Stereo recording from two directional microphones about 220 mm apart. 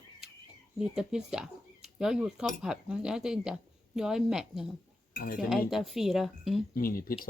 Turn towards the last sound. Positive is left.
turn(degrees=40)  # may be behind; listen again after turning